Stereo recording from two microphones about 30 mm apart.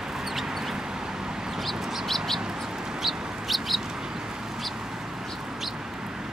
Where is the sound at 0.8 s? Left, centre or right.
Right.